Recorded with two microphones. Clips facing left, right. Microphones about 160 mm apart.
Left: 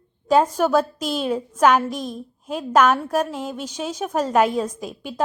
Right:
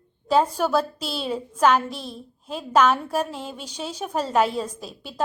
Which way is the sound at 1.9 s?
45° left (ahead or behind).